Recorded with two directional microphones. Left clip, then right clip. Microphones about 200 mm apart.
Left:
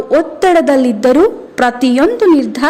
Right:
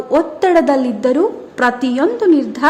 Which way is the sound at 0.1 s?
10° left (ahead or behind).